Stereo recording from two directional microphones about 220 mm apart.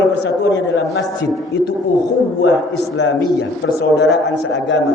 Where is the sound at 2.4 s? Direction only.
55° left (ahead or behind).